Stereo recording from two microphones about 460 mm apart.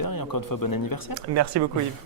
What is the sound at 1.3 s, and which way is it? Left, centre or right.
Speech, right.